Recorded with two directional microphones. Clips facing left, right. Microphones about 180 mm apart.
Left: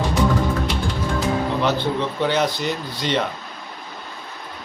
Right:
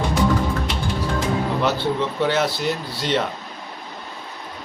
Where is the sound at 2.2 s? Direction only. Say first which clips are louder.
Even; 5° right (ahead or behind).